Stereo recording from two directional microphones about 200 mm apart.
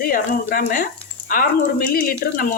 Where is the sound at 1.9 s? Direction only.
45° left (ahead or behind).